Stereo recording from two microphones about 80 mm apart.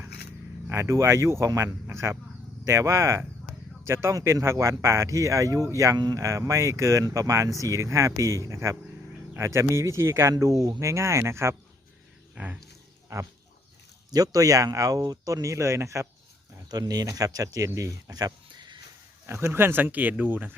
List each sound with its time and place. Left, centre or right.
0.7 s speech: right
6.0 s speech: right
6.2 s speech: right
12.3 s speech: centre
13.1 s speech: right
16.6 s speech: right
19.3 s speech: right